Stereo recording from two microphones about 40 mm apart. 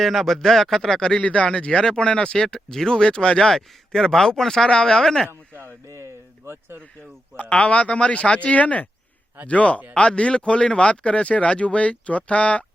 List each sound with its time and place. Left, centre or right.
0.0 s speech: centre
1.2 s speech: left
3.5 s speech: centre
4.7 s speech: left
6.4 s speech: right
7.5 s speech: left